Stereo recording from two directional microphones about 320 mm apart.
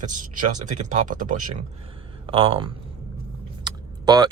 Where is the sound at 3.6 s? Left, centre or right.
Centre.